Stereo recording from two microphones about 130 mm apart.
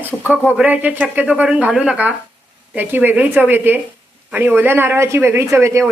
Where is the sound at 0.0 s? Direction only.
10° right (ahead or behind).